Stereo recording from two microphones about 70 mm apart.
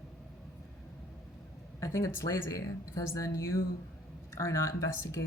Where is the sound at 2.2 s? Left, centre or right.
Left.